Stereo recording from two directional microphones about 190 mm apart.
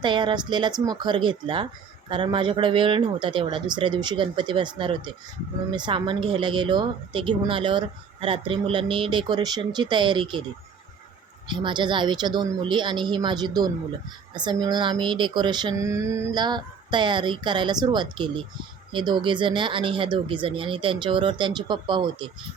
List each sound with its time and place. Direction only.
0.0 s speech: 25° right (ahead or behind)
11.4 s speech: 25° right (ahead or behind)